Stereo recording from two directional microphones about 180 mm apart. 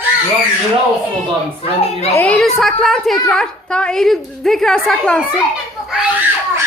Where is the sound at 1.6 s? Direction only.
35° left (ahead or behind).